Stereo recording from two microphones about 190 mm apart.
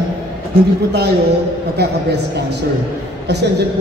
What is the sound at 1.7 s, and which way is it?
A man's voice, 60° right (ahead or behind).